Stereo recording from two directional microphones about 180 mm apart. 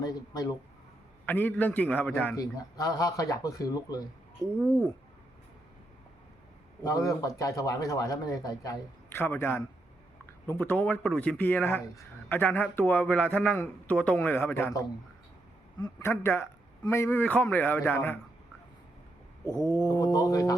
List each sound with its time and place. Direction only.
0.0 s a man's voice: 20° left (ahead or behind)
2.3 s a man's voice: 20° left (ahead or behind)
4.5 s speech: 15° right (ahead or behind)
6.8 s a man's voice: 20° left (ahead or behind)
19.7 s a man's voice: 20° left (ahead or behind)